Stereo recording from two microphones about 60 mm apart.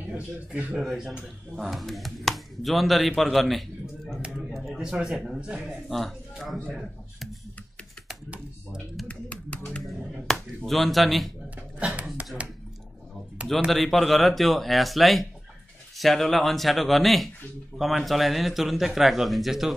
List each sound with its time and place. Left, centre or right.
0.5 s speech: right
1.6 s speech: centre
5.4 s speech: centre
5.9 s speech: centre
9.0 s music: left
9.7 s a sound: centre
10.6 s speech: centre
11.8 s a sound: right
13.7 s speech: centre